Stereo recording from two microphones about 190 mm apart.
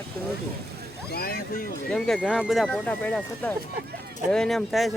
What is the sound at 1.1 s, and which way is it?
Speech, 50° left (ahead or behind).